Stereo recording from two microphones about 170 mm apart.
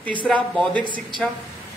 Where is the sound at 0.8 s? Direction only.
25° right (ahead or behind).